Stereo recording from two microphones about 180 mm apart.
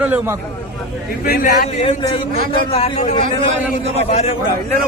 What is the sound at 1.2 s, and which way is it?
Speech, 55° left (ahead or behind).